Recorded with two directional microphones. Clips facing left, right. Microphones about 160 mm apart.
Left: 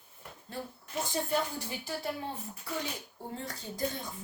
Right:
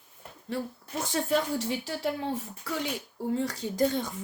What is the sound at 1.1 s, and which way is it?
A woman's voice, 90° right.